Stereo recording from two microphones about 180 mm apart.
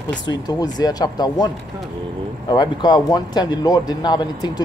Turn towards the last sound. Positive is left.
turn(degrees=25)  # may be behind; listen again after turning